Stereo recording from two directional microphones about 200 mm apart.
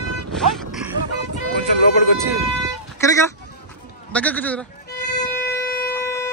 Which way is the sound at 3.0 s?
15° left (ahead or behind).